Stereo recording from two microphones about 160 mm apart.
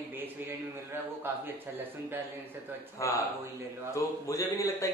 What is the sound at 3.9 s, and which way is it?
Speech, 20° left (ahead or behind).